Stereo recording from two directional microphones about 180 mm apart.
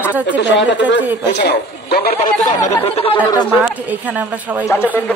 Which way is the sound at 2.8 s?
30° left (ahead or behind).